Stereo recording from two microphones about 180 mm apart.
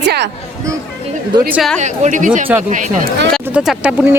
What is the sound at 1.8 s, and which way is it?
A woman's voice, 40° right (ahead or behind).